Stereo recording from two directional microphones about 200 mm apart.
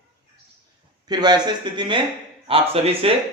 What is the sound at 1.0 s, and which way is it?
Speech, 20° right (ahead or behind).